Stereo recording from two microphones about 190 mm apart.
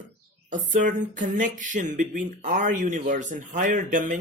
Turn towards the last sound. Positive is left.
turn(degrees=-40)  # may be behind; listen again after turning